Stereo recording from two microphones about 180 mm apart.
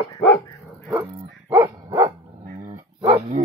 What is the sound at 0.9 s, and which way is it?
Dog, 15° right (ahead or behind).